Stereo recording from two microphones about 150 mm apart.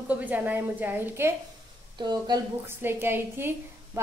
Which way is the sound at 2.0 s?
30° right (ahead or behind).